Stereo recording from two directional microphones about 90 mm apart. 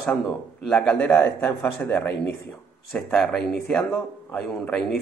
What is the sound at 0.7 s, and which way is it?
Speech, 15° left (ahead or behind).